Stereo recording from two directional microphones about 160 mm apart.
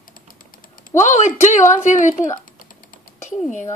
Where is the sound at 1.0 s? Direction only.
50° left (ahead or behind).